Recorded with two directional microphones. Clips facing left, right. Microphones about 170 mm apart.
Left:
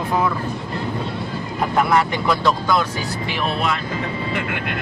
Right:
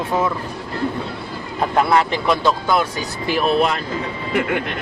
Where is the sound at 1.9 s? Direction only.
25° right (ahead or behind).